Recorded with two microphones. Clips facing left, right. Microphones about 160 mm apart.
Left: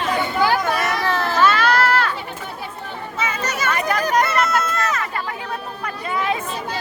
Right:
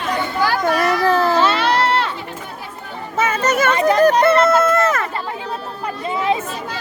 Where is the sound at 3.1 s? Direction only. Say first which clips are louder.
Right 8 dB; 50° right (ahead or behind).